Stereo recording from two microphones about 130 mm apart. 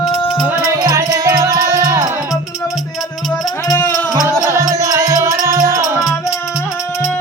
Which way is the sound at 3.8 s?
20° left (ahead or behind).